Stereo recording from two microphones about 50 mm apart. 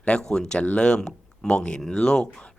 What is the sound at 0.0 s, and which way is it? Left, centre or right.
Speech, left.